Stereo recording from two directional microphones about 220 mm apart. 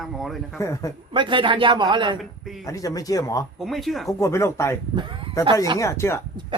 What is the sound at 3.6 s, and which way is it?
Speech, centre (ahead or behind).